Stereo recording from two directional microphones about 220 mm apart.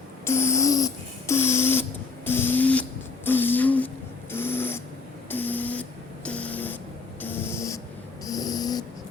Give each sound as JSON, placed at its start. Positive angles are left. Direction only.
{"t": 0.3, "sound": "a sound", "side_deg": 10}
{"t": 7.2, "sound": "snoring", "side_deg": 10}
{"t": 8.2, "sound": "dog", "side_deg": 15}